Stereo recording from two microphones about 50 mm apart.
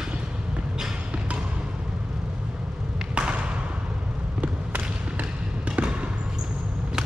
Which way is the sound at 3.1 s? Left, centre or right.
Centre.